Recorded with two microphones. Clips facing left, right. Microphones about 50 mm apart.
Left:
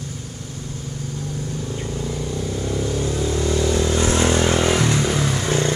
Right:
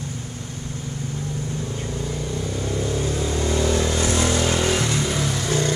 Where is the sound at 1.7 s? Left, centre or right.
Centre.